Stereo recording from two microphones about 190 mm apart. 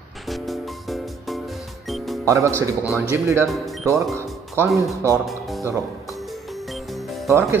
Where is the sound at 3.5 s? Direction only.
Centre (ahead or behind).